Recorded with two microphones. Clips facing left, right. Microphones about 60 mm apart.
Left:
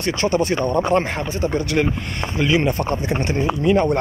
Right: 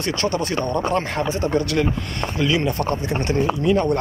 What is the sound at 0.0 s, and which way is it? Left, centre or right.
Speech, centre.